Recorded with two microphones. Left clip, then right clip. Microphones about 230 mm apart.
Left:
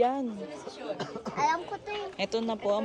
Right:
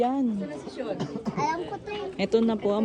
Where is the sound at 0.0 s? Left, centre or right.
Left.